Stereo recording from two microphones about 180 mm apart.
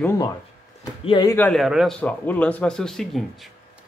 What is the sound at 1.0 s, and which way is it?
Speech, 25° left (ahead or behind).